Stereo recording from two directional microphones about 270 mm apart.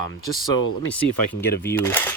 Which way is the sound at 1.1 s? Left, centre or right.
Left.